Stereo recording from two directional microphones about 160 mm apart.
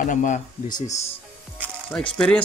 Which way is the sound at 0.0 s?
50° left (ahead or behind).